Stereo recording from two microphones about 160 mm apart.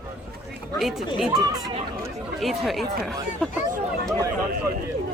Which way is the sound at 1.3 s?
25° right (ahead or behind).